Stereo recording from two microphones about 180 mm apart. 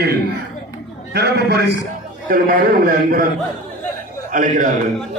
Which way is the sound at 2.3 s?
50° right (ahead or behind).